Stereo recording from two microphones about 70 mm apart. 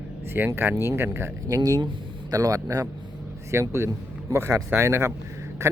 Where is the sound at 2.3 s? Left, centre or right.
Right.